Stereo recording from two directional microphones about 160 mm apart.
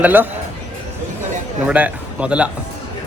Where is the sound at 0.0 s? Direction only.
10° right (ahead or behind).